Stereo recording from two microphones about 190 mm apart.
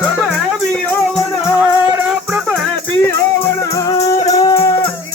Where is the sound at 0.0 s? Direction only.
Centre (ahead or behind).